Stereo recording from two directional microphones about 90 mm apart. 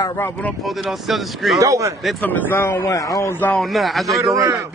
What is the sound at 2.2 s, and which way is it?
Speech, 20° left (ahead or behind).